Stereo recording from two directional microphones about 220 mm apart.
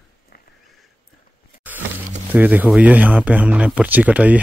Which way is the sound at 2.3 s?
5° right (ahead or behind).